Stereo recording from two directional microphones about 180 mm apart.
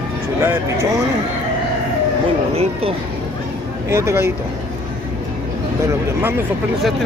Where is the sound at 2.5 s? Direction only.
35° right (ahead or behind).